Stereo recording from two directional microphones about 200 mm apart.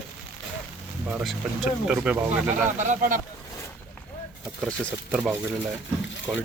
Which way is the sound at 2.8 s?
40° right (ahead or behind).